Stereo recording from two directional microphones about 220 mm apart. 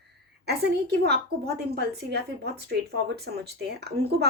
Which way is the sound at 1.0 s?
45° right (ahead or behind).